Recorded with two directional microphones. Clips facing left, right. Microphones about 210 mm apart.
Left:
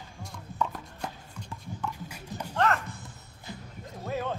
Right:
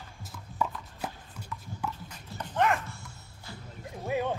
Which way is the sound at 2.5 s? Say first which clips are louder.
Even; 10° right (ahead or behind).